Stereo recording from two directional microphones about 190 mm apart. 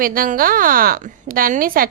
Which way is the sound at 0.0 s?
50° right (ahead or behind).